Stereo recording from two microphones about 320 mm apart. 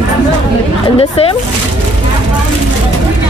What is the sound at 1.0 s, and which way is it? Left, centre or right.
Speech, centre.